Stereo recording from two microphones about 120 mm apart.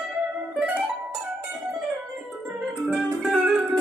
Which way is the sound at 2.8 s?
5° right (ahead or behind).